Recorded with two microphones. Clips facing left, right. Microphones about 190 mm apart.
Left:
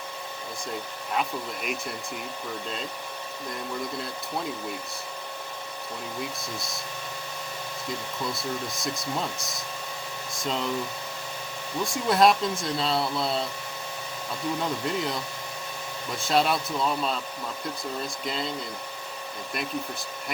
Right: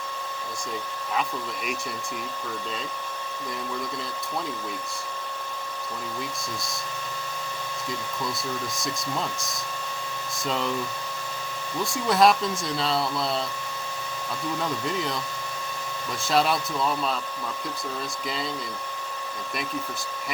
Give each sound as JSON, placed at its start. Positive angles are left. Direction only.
{"t": 12.0, "sound": "speech", "side_deg": 0}
{"t": 16.2, "sound": "speech", "side_deg": 0}